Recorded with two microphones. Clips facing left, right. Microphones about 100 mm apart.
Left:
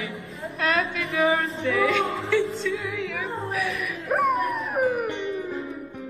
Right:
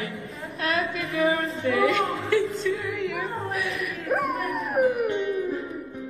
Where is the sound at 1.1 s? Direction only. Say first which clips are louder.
Left 1 dB; 90° left.